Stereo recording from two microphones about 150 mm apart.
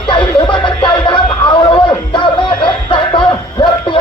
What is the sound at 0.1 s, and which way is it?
Music, 30° left (ahead or behind).